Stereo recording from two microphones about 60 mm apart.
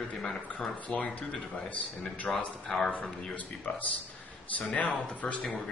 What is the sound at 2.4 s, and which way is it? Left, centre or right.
Speech, centre.